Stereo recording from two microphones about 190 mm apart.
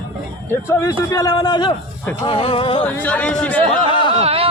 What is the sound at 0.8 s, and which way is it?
A man's voice, 15° left (ahead or behind).